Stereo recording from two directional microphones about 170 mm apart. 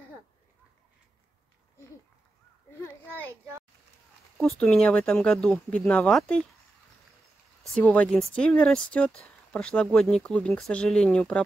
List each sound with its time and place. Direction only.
3.3 s a child's voice: 15° right (ahead or behind)
4.4 s speech: 5° left (ahead or behind)
7.7 s speech: 10° left (ahead or behind)